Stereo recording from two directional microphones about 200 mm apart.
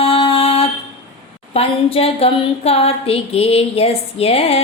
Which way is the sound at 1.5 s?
30° left (ahead or behind).